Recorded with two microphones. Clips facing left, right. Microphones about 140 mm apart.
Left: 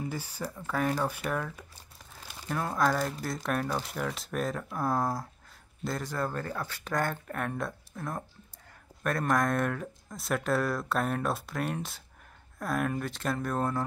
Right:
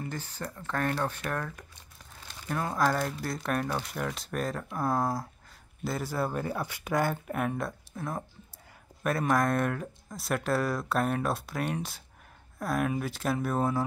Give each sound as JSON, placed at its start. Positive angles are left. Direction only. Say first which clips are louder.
{"t": 0.0, "sound": "speech", "louder": "left 2 dB", "side_deg": 10}